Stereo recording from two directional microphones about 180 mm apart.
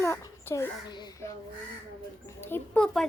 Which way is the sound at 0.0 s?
15° left (ahead or behind).